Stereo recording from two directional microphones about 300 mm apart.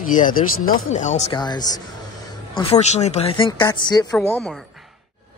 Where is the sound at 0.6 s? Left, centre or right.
Left.